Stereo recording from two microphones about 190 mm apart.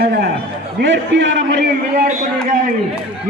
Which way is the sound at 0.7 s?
70° right (ahead or behind).